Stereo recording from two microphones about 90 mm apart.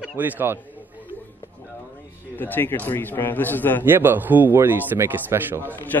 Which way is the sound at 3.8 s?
25° right (ahead or behind).